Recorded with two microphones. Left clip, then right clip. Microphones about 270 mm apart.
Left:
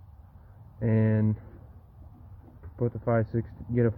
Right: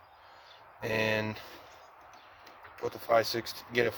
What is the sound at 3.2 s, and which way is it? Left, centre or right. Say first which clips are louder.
Speech: right 2 dB; centre.